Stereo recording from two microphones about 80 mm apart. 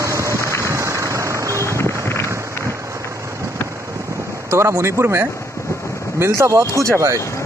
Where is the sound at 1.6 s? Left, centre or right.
Left.